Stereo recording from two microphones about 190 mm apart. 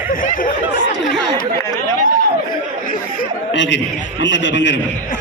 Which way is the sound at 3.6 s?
75° left (ahead or behind).